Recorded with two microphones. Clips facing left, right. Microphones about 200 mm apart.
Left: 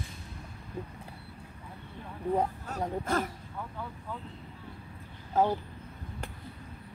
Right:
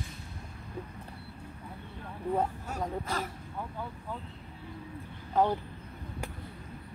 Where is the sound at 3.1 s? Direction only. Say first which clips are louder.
Left 9 dB; 50° left (ahead or behind).